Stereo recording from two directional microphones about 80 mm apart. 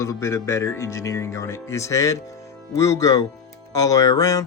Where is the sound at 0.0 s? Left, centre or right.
Left.